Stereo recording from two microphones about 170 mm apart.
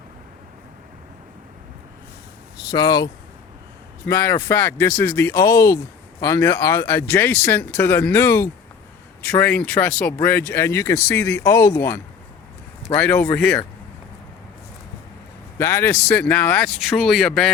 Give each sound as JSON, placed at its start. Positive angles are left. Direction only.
{"t": 2.6, "sound": "speech", "side_deg": 20}
{"t": 15.5, "sound": "speech", "side_deg": 15}